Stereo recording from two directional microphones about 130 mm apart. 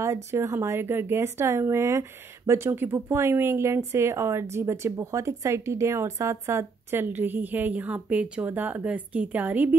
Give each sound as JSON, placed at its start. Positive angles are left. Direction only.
{"t": 0.0, "sound": "speech", "side_deg": -20}